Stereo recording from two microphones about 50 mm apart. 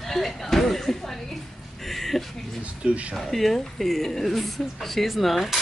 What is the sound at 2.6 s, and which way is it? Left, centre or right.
Speech, right.